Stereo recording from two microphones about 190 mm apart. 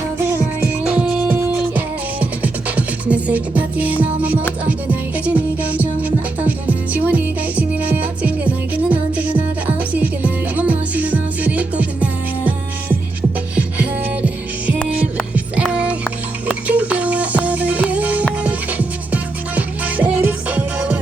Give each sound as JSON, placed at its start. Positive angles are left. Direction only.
{"t": 0.2, "sound": "music", "side_deg": -15}
{"t": 15.5, "sound": "music", "side_deg": -5}